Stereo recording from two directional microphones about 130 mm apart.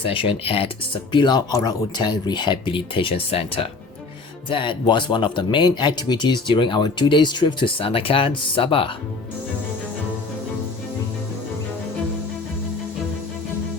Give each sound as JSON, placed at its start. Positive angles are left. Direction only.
{"t": 0.0, "sound": "speech", "side_deg": 45}
{"t": 1.1, "sound": "speech", "side_deg": 35}